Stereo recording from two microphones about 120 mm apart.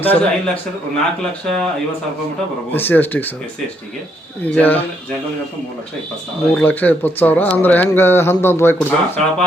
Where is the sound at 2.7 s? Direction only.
15° left (ahead or behind).